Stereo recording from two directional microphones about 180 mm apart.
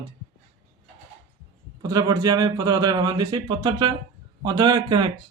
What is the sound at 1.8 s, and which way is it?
A man's voice, 20° right (ahead or behind).